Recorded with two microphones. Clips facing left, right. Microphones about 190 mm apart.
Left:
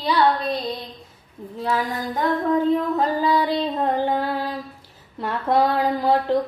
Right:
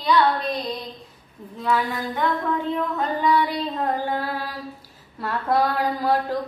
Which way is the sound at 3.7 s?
20° left (ahead or behind).